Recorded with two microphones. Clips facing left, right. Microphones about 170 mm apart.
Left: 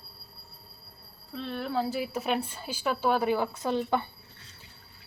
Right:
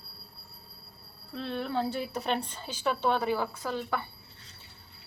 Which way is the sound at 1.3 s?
Centre (ahead or behind).